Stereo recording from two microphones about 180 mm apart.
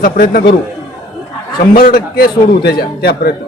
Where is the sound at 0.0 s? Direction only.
55° left (ahead or behind).